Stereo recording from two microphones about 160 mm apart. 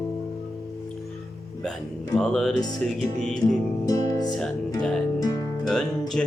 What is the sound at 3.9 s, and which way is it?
Music, 25° left (ahead or behind).